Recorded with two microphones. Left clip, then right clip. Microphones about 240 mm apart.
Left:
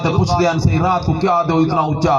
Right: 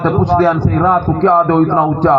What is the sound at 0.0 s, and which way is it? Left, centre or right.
A man's voice, left.